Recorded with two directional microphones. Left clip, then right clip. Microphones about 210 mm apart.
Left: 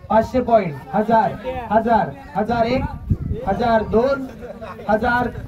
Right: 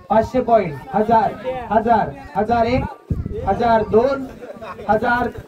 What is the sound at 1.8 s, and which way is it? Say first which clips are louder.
Speech: right 1 dB; 30° left (ahead or behind).